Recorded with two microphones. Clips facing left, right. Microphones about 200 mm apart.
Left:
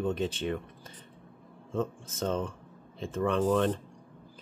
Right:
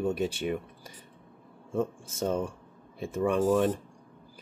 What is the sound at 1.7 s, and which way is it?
Speech, 10° right (ahead or behind).